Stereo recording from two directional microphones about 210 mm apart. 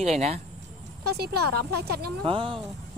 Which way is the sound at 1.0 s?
50° right (ahead or behind).